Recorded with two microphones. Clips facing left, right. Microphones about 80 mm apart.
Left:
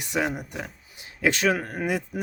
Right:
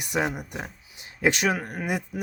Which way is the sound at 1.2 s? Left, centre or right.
Centre.